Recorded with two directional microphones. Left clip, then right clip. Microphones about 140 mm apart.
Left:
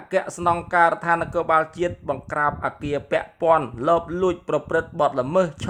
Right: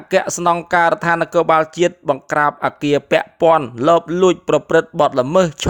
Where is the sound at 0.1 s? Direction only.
55° right (ahead or behind).